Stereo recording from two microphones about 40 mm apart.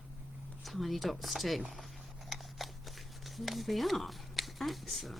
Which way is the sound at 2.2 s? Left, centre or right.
Centre.